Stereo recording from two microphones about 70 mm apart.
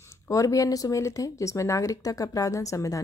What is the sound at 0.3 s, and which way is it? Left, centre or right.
A woman's voice, left.